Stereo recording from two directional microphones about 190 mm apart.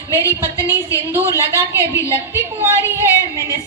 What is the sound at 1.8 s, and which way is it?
Speech, 15° left (ahead or behind).